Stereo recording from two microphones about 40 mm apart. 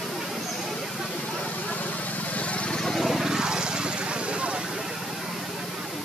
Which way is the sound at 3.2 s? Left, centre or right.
Centre.